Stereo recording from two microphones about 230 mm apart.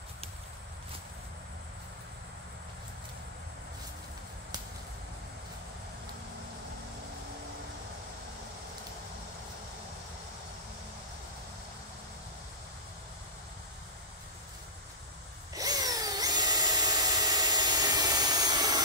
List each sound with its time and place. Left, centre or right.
15.5 s drill: centre